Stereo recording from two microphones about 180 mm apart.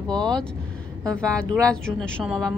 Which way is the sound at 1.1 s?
5° left (ahead or behind).